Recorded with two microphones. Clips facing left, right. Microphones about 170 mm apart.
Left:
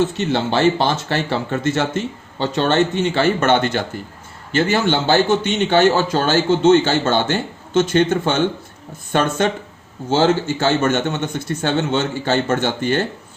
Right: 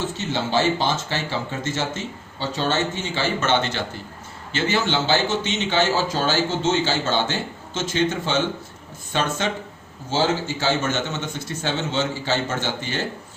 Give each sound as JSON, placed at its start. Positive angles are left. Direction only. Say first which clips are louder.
{"t": 0.2, "sound": "a man's voice", "louder": "left 5 dB", "side_deg": 60}